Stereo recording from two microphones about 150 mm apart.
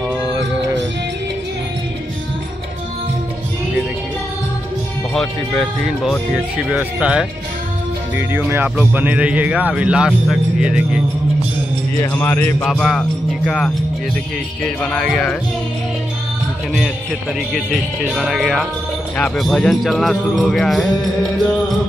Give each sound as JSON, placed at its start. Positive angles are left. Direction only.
{"t": 5.1, "sound": "speech", "side_deg": 5}
{"t": 12.0, "sound": "music", "side_deg": 20}
{"t": 12.6, "sound": "speech", "side_deg": 0}
{"t": 14.6, "sound": "music", "side_deg": 5}
{"t": 17.5, "sound": "speech", "side_deg": 0}